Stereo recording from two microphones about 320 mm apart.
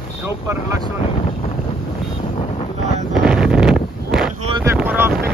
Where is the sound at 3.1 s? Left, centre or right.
Centre.